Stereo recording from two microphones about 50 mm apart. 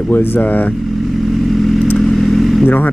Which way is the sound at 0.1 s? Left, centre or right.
Left.